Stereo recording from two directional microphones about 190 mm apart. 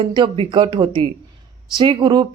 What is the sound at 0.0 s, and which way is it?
Speech, 25° right (ahead or behind).